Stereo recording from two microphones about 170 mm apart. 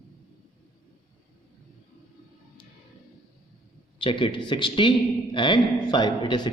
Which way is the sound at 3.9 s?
30° left (ahead or behind).